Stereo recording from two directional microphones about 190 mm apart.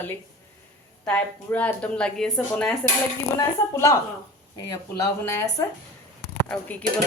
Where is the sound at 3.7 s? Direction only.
15° left (ahead or behind).